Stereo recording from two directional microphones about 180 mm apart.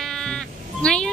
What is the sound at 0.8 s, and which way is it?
Speech, 5° left (ahead or behind).